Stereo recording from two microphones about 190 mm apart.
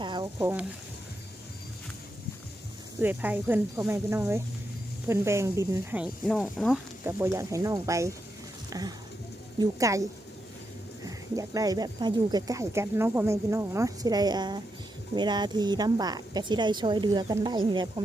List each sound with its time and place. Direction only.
0.0 s a sound: 20° right (ahead or behind)
3.0 s speech: 10° right (ahead or behind)
6.2 s speech: centre (ahead or behind); by 10.0 s 15° right (ahead or behind)
11.0 s speech: 20° right (ahead or behind)